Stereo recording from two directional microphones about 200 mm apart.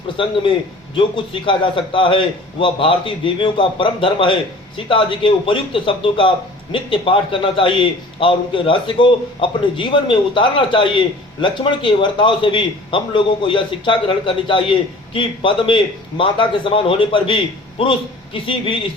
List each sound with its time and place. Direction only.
0.2 s speech: 25° left (ahead or behind)